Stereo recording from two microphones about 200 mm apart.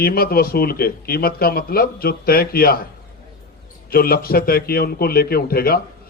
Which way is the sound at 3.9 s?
50° left (ahead or behind).